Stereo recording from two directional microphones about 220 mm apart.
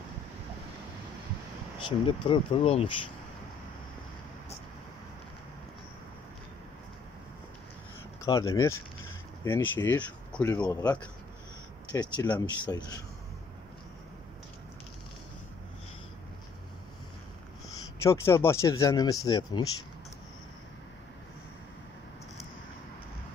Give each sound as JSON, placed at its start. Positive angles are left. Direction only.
{"t": 1.9, "sound": "speech", "side_deg": 25}
{"t": 8.2, "sound": "speech", "side_deg": 15}
{"t": 18.0, "sound": "speech", "side_deg": 10}